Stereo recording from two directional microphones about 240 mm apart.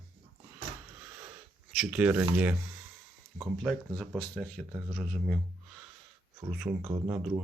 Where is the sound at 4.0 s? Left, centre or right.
Centre.